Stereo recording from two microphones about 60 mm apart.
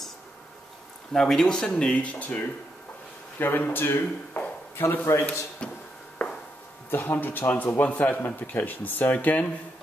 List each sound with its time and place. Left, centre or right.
1.1 s speech: centre; by 2.4 s left
3.3 s a man's voice: left
5.6 s a sound: centre
6.9 s a man's voice: left